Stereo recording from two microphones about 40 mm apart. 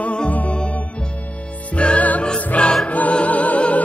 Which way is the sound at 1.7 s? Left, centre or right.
Left.